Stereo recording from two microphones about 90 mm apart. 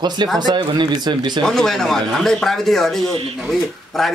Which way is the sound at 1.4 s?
5° left (ahead or behind).